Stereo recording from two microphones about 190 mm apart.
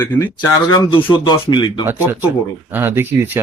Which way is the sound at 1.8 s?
10° right (ahead or behind).